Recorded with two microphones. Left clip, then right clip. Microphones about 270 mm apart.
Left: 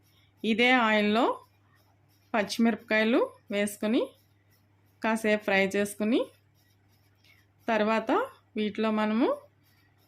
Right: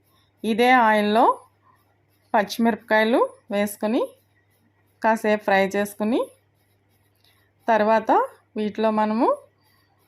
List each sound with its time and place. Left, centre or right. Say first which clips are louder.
0.4 s speech: right 7 dB; centre
2.3 s speech: right 7 dB; centre
7.6 s speech: right 8 dB; centre